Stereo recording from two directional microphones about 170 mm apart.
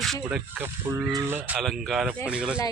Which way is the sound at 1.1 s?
15° right (ahead or behind).